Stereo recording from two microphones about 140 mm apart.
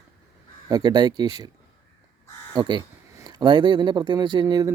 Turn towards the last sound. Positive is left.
turn(degrees=-30)  # may be behind; listen again after turning